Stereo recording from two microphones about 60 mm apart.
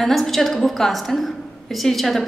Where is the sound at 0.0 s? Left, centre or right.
Centre.